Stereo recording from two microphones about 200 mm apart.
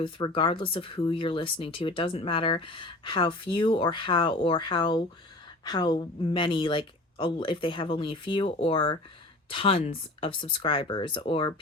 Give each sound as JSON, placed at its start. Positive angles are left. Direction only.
{"t": 0.0, "sound": "speech", "side_deg": 25}